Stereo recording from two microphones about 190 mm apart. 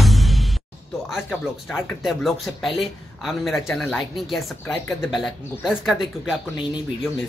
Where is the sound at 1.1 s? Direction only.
Centre (ahead or behind).